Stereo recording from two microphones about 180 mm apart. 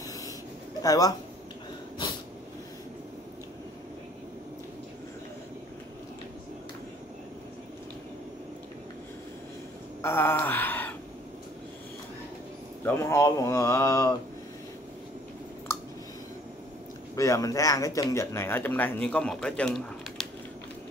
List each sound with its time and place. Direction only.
0.8 s speech: 20° left (ahead or behind)
10.0 s a sound: 15° left (ahead or behind)
12.8 s speech: 15° left (ahead or behind)
17.1 s speech: 15° left (ahead or behind)